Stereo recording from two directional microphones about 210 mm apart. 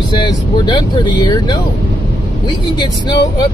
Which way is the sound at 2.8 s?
20° left (ahead or behind).